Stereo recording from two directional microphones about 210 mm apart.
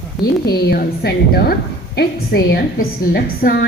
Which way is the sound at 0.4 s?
50° left (ahead or behind).